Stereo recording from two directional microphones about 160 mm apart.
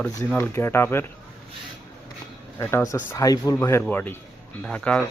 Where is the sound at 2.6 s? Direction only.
15° left (ahead or behind).